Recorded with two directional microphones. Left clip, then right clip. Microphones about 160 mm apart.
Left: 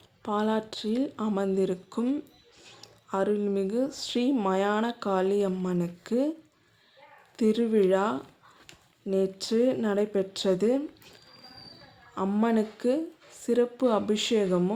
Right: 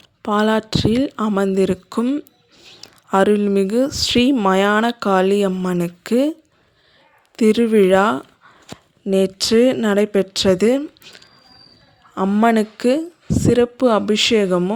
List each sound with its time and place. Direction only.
0.2 s speech: 50° right (ahead or behind)
2.8 s speech: 55° right (ahead or behind)
7.3 s speech: 50° right (ahead or behind)
12.1 s speech: 45° right (ahead or behind)